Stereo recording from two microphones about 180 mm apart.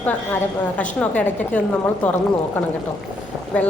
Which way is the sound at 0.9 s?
5° left (ahead or behind).